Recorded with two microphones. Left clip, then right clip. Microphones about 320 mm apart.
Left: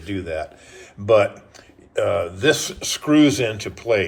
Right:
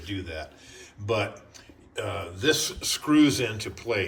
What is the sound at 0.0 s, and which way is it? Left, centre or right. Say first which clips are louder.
Speech: left 9 dB; centre.